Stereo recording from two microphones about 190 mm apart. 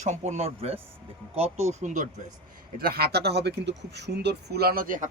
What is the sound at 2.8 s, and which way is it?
Speech, 55° right (ahead or behind).